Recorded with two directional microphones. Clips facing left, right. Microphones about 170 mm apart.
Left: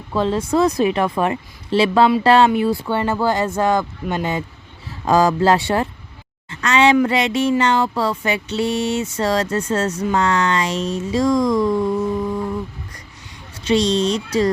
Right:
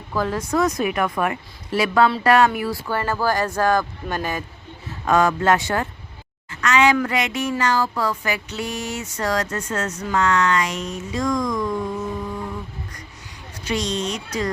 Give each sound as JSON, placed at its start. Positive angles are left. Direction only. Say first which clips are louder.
{"t": 0.1, "sound": "speech", "louder": "left 4 dB", "side_deg": 25}
{"t": 13.7, "sound": "speech", "louder": "left 8 dB", "side_deg": 30}